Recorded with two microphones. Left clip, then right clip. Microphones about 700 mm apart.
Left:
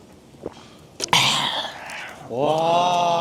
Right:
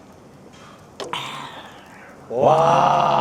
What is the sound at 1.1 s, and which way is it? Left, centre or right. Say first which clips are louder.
Whispering: left 13 dB; left.